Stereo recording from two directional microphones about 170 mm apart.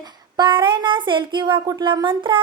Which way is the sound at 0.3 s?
30° right (ahead or behind).